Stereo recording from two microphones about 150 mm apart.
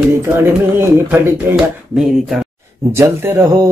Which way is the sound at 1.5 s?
15° right (ahead or behind).